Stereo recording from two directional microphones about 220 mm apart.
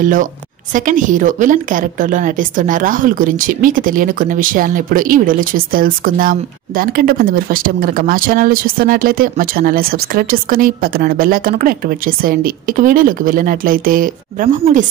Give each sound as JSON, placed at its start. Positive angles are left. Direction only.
{"t": 0.0, "sound": "a woman's voice", "side_deg": -35}